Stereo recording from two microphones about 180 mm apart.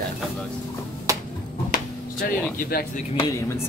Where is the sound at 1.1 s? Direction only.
20° right (ahead or behind).